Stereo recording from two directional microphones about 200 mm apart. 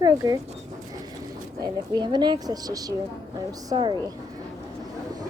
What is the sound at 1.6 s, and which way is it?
A woman's voice, 20° right (ahead or behind).